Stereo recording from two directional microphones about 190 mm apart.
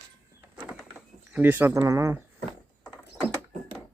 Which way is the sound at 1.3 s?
10° right (ahead or behind).